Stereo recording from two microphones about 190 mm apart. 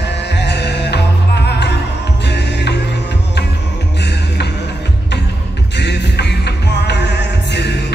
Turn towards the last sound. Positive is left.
turn(degrees=65)  # may be behind; listen again after turning